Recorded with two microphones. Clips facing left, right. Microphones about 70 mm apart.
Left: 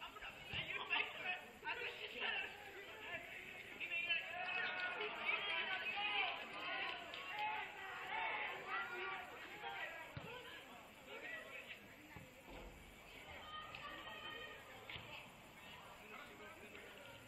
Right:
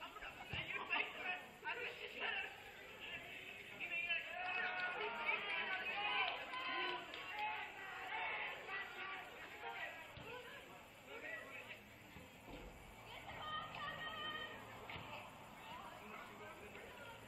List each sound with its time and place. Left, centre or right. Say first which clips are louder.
0.0 s chatter: right 1 dB; centre
3.9 s run: even; centre
7.2 s crowd: left 1 dB; centre
9.1 s a sound: left 1 dB; centre
13.4 s a sound: right 6 dB; right
14.1 s music: right 4 dB; right